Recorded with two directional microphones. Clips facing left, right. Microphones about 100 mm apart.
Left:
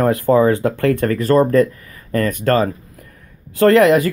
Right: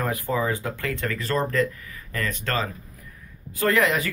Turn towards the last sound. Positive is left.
turn(degrees=55)  # may be behind; listen again after turning